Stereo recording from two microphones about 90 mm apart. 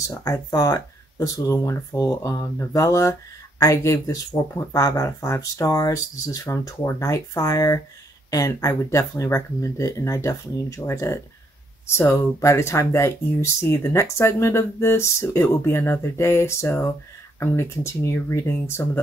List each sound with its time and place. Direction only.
0.0 s speech: 40° left (ahead or behind)